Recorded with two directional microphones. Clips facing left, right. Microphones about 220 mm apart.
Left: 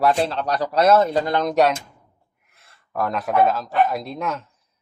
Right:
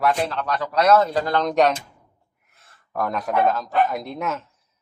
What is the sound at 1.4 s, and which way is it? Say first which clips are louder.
Speech: right 1 dB; 5° left (ahead or behind).